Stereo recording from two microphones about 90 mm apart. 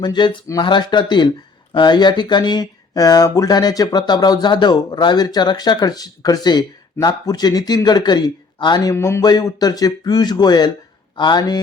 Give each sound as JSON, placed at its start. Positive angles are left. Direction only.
{"t": 0.0, "sound": "speech", "side_deg": 60}
{"t": 8.9, "sound": "speech", "side_deg": 35}
{"t": 9.2, "sound": "speech", "side_deg": 50}